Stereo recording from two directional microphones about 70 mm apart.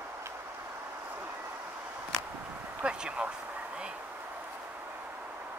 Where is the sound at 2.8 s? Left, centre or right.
Centre.